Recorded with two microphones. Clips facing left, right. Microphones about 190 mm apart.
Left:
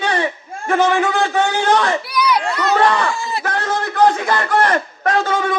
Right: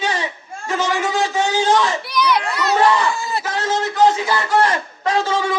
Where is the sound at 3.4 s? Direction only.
55° left (ahead or behind).